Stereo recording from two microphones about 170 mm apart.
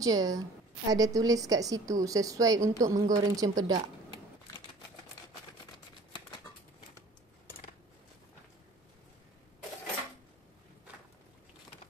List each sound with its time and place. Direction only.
0.0 s a woman's voice: 20° right (ahead or behind)